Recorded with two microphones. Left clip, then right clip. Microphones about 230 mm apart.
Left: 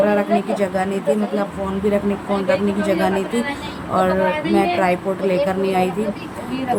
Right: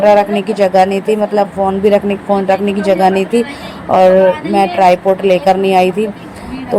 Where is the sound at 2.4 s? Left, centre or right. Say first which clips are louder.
Right 4 dB; right.